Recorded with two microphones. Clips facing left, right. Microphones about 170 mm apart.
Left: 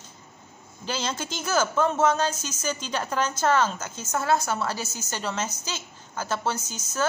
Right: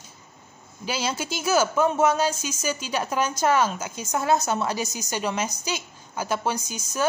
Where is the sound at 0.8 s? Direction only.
10° right (ahead or behind).